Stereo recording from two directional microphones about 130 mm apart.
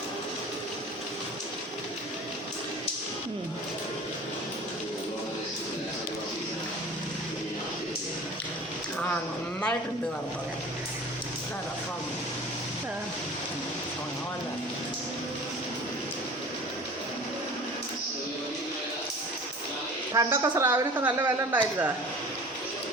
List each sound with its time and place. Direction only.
20.1 s a woman's voice: 25° right (ahead or behind)